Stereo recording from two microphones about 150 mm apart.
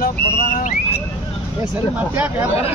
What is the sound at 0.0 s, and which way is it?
Vehicle, 85° left.